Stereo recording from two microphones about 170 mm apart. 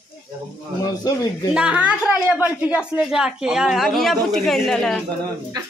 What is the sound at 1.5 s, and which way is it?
A woman's voice, 5° right (ahead or behind).